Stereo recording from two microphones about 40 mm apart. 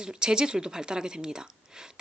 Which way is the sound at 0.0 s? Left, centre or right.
Centre.